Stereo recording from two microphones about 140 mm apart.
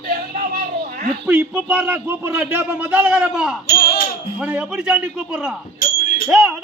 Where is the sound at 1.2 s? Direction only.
10° right (ahead or behind).